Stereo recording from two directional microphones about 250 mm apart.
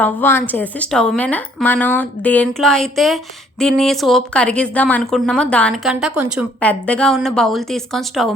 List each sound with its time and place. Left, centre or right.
0.0 s a woman's voice: centre